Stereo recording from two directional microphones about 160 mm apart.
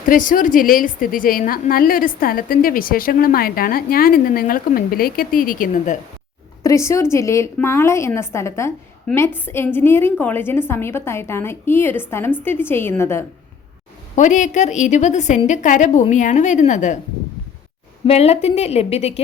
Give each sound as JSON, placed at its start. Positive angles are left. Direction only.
{"t": 0.0, "sound": "a woman's voice", "side_deg": 55}
{"t": 6.6, "sound": "a woman's voice", "side_deg": 20}
{"t": 14.2, "sound": "speech", "side_deg": 50}
{"t": 18.0, "sound": "a woman's voice", "side_deg": 40}